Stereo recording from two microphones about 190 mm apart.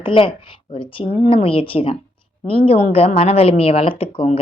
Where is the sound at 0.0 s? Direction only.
25° left (ahead or behind).